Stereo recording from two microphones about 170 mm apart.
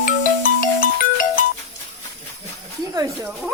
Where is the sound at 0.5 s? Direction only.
55° left (ahead or behind).